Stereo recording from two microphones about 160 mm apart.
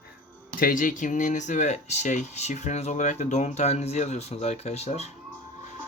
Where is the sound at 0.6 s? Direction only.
60° left (ahead or behind); by 5.1 s 40° left (ahead or behind).